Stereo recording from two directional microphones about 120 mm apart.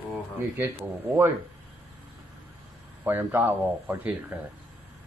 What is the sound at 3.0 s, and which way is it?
Speech, 15° right (ahead or behind).